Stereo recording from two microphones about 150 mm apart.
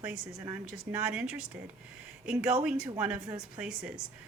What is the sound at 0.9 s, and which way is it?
A woman's voice, 5° right (ahead or behind).